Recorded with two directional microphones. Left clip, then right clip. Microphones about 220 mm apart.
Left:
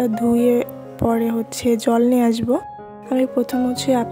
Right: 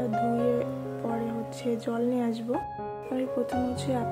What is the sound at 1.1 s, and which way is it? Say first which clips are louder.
Speech: left 11 dB; 45° left (ahead or behind).